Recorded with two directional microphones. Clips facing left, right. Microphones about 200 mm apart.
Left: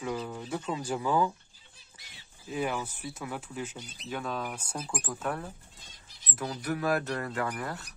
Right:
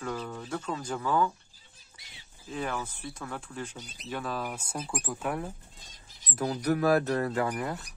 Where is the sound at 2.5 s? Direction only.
10° left (ahead or behind).